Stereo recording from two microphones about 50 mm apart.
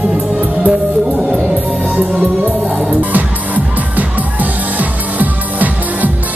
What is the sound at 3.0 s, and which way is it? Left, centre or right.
Music, right.